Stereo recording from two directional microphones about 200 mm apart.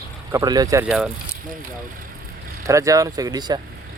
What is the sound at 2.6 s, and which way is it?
Speech, 15° right (ahead or behind).